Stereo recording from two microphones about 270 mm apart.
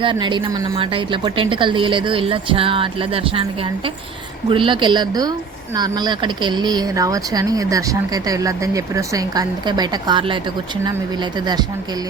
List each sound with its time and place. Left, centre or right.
0.0 s a woman's voice: centre